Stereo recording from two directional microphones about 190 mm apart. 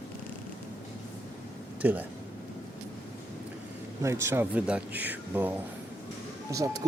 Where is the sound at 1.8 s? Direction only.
10° right (ahead or behind).